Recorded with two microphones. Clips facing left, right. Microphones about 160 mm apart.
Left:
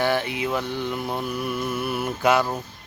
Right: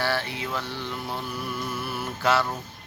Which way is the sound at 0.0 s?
20° left (ahead or behind).